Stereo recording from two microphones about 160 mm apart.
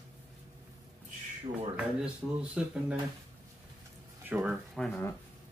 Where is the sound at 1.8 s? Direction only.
5° right (ahead or behind).